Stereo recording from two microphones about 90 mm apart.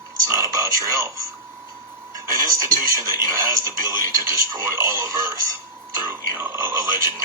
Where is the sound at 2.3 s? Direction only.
35° right (ahead or behind).